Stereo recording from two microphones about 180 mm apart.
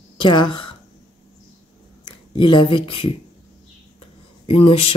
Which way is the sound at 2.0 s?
25° left (ahead or behind).